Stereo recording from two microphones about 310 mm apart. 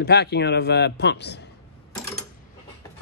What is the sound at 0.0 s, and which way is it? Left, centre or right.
Speech, left.